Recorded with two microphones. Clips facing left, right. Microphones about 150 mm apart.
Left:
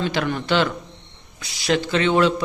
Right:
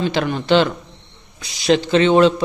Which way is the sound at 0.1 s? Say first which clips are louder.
Right 5 dB; 25° right (ahead or behind).